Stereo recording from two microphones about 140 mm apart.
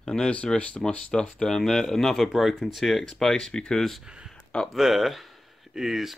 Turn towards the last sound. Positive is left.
turn(degrees=0)  # may be behind; listen again after turning